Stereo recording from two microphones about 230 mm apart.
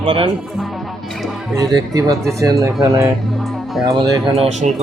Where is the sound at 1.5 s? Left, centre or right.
Centre.